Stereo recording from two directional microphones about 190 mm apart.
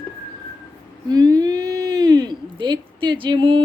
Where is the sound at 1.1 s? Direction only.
20° right (ahead or behind).